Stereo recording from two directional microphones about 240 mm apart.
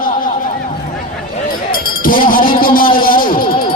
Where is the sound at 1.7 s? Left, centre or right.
Left.